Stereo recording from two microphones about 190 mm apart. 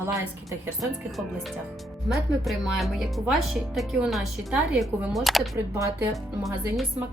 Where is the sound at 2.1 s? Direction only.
Centre (ahead or behind).